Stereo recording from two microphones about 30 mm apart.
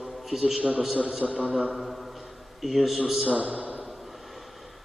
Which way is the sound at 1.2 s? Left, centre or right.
Centre.